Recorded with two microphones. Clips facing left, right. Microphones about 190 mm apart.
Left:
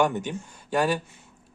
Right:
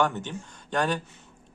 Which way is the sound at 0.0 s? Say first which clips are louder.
Left 3 dB; 10° left (ahead or behind).